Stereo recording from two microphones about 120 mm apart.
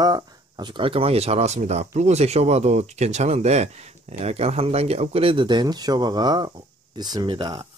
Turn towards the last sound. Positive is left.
turn(degrees=-45)  # may be behind; listen again after turning